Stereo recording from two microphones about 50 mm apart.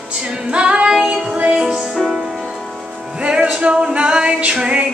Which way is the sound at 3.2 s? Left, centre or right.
Right.